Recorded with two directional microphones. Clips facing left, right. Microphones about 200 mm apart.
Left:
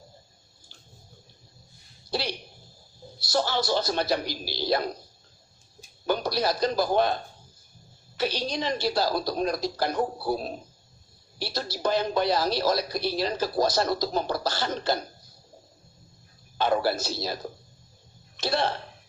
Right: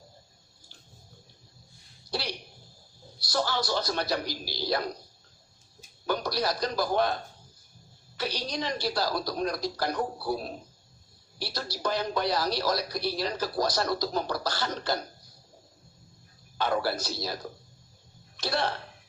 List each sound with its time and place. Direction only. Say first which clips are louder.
2.0 s a sound: left 4 dB; 25° left (ahead or behind)
3.2 s speech: left 3 dB; 25° left (ahead or behind)
6.1 s speech: left 3 dB; 25° left (ahead or behind)
16.6 s speech: left 4 dB; 25° left (ahead or behind)
18.3 s speech: left 3 dB; 25° left (ahead or behind)